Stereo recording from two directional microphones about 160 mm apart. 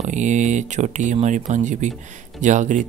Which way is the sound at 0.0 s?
50° right (ahead or behind).